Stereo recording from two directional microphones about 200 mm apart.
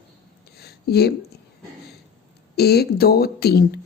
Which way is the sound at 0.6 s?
55° left (ahead or behind).